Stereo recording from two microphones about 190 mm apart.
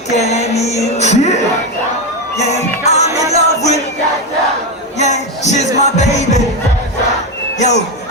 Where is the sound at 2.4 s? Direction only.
35° left (ahead or behind).